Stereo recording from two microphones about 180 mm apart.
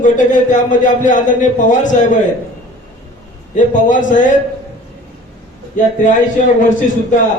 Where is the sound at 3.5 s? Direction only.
45° left (ahead or behind).